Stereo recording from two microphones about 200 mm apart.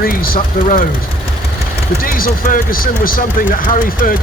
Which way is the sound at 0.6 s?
40° left (ahead or behind).